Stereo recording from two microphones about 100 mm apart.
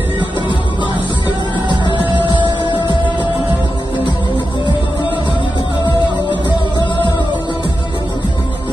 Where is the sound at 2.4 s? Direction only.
50° right (ahead or behind).